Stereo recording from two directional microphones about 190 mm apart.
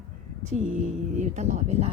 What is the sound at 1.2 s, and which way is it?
Speech, 40° right (ahead or behind).